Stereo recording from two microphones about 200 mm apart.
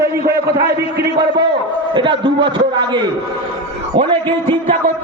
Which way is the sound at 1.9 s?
25° right (ahead or behind).